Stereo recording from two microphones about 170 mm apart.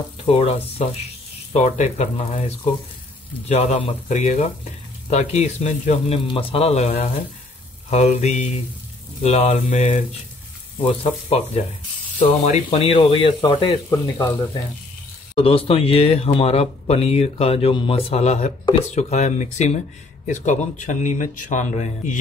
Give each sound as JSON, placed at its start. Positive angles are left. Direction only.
{"t": 0.2, "sound": "speech", "side_deg": 35}
{"t": 10.8, "sound": "speech", "side_deg": 35}
{"t": 12.6, "sound": "speech", "side_deg": 35}
{"t": 13.8, "sound": "speech", "side_deg": 15}
{"t": 15.3, "sound": "speech", "side_deg": 35}